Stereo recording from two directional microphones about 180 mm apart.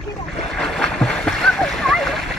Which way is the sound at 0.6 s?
Centre (ahead or behind).